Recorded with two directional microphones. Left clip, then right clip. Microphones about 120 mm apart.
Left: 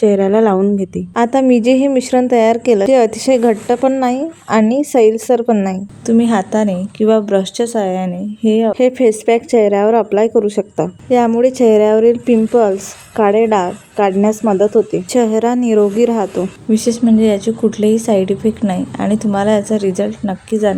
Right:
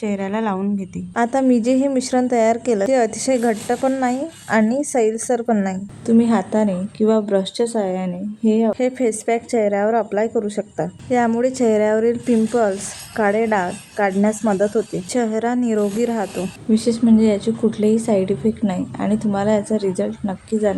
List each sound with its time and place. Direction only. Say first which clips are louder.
0.0 s a woman's voice: left 12 dB; 40° left (ahead or behind)
1.1 s a woman's voice: left 5 dB; 20° left (ahead or behind)
11.1 s a woman's voice: left 6 dB; 20° left (ahead or behind)